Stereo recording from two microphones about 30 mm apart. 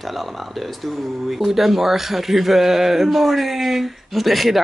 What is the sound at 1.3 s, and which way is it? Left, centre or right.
Speech, centre.